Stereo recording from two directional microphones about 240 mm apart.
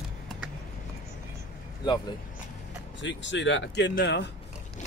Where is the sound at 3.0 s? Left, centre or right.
Left.